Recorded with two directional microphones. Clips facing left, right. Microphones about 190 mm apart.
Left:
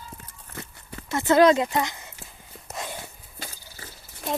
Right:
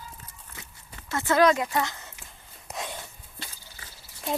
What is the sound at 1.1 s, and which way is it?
Speech, 20° left (ahead or behind).